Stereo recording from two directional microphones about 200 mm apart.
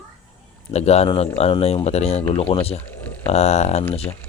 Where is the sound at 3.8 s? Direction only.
10° left (ahead or behind).